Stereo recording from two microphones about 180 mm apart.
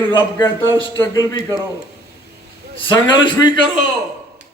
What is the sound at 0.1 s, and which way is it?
A man's voice, 25° left (ahead or behind).